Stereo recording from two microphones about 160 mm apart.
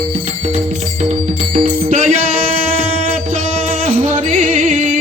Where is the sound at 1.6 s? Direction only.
40° right (ahead or behind).